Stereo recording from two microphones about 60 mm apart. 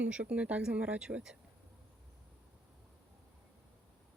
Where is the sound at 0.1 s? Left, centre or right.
Centre.